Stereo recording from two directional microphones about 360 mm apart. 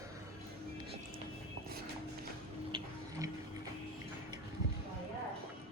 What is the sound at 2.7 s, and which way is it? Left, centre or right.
Music, centre.